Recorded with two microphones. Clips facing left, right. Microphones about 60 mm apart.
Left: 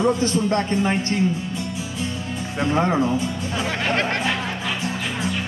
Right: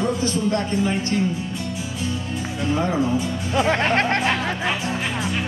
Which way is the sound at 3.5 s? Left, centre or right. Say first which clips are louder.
Right 5 dB; right.